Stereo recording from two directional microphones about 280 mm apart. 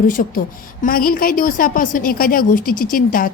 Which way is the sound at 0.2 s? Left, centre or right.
Left.